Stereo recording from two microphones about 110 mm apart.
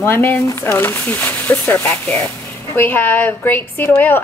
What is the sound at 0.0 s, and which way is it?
A woman's voice, 20° left (ahead or behind).